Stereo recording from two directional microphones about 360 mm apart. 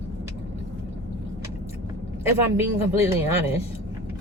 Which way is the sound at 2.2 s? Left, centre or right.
Centre.